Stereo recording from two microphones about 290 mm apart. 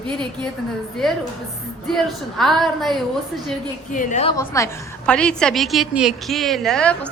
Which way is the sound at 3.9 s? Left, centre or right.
Left.